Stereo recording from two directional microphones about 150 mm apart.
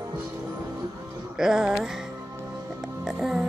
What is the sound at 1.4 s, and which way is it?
Speech, 5° right (ahead or behind).